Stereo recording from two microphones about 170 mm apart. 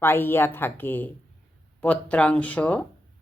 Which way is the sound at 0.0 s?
15° left (ahead or behind).